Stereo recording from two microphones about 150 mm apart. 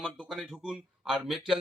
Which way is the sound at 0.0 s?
Centre (ahead or behind).